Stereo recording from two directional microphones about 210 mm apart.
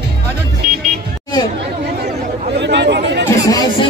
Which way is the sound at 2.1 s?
55° right (ahead or behind).